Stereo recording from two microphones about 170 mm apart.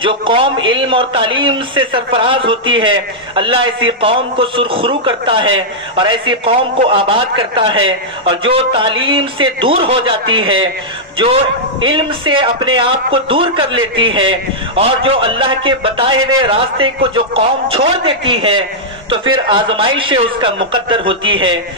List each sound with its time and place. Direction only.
0.0 s a man's voice: 30° right (ahead or behind)
11.8 s a man's voice: 30° right (ahead or behind)